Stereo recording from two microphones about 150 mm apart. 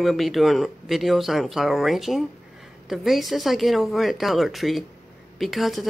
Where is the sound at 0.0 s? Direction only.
Centre (ahead or behind).